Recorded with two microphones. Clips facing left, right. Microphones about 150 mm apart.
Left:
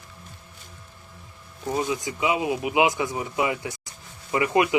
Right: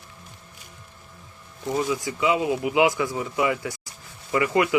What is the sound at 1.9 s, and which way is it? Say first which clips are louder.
Speech: right 2 dB; 20° left (ahead or behind).